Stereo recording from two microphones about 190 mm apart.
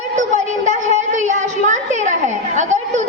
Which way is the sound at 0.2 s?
40° right (ahead or behind).